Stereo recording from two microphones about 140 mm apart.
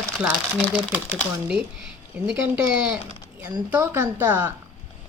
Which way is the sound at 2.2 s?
5° right (ahead or behind).